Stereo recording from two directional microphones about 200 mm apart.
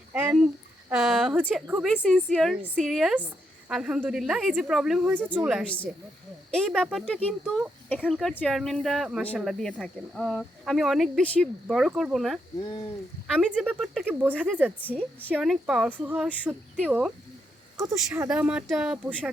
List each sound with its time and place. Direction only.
0.1 s speech: 10° right (ahead or behind)
12.5 s speech: 20° left (ahead or behind)
13.2 s speech: centre (ahead or behind)
14.8 s a woman's voice: 10° left (ahead or behind)